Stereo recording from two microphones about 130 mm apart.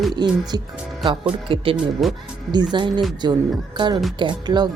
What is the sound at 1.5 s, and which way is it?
Speech, 45° right (ahead or behind).